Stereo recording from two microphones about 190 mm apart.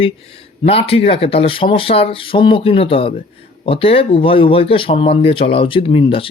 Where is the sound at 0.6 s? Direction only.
30° left (ahead or behind).